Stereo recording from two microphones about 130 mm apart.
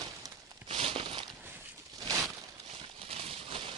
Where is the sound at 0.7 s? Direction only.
45° right (ahead or behind).